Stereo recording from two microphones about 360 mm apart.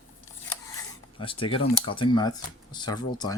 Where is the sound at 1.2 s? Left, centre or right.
Centre.